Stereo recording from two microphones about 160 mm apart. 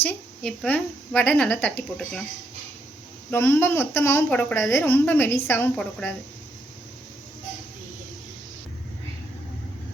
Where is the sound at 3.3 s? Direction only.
15° left (ahead or behind).